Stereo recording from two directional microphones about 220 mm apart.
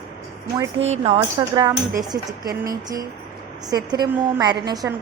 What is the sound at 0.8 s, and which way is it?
A woman's voice, 30° right (ahead or behind).